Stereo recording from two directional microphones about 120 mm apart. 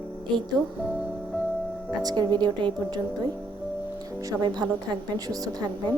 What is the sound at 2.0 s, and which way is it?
Speech, 35° right (ahead or behind).